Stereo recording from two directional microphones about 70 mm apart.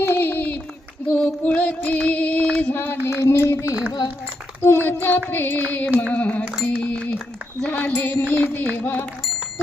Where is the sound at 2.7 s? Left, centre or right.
Left.